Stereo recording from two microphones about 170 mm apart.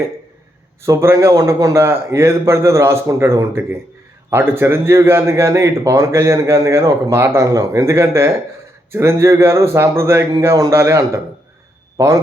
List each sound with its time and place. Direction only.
0.8 s a man's voice: 15° right (ahead or behind)